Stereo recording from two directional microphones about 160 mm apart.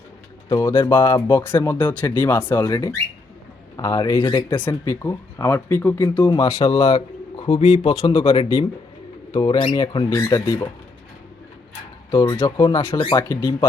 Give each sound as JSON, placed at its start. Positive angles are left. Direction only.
{"t": 0.4, "sound": "speech", "side_deg": 15}
{"t": 7.3, "sound": "bird", "side_deg": 25}
{"t": 7.8, "sound": "speech", "side_deg": 30}
{"t": 12.1, "sound": "speech", "side_deg": 20}
{"t": 13.1, "sound": "speech", "side_deg": 20}